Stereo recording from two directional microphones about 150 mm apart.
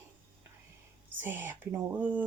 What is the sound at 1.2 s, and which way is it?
Speech, 10° right (ahead or behind).